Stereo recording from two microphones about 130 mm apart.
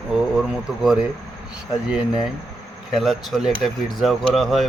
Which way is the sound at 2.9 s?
Centre (ahead or behind).